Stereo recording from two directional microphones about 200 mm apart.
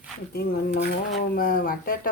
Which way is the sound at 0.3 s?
55° left (ahead or behind).